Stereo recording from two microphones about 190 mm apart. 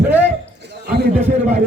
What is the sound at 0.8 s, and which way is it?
Speech, 60° right (ahead or behind).